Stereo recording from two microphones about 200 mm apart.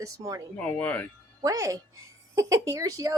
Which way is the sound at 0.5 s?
5° left (ahead or behind).